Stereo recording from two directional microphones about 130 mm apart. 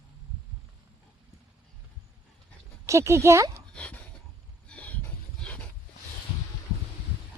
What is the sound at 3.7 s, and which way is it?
Dog, 10° left (ahead or behind).